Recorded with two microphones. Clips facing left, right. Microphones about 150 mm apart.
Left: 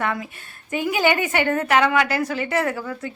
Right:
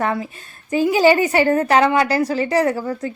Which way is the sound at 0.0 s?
30° right (ahead or behind).